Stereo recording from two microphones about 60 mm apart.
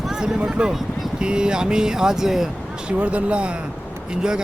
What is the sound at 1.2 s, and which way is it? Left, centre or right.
Speech, centre.